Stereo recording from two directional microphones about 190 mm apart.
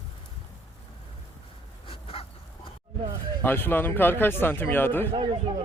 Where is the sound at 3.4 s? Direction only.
10° left (ahead or behind).